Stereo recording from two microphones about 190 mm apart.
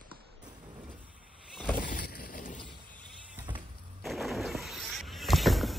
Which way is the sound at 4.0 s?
Centre (ahead or behind).